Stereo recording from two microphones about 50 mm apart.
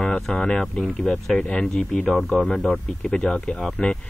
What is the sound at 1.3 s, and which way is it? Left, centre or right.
Speech, left.